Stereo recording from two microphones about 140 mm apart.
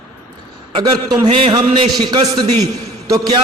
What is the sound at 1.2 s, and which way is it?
Speech, 40° right (ahead or behind).